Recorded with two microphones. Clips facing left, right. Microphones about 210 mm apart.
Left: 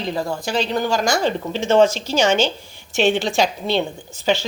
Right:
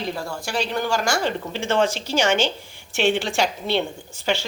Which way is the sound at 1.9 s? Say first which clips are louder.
Left 2 dB; 15° right (ahead or behind).